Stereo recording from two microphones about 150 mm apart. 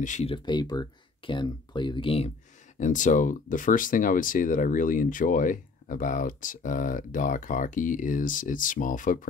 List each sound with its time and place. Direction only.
0.0 s speech: 55° left (ahead or behind)
0.3 s speech: 30° left (ahead or behind)
2.8 s speech: 55° left (ahead or behind)